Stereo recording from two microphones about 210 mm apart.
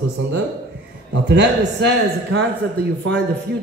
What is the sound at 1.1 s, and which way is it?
Speech, 55° right (ahead or behind).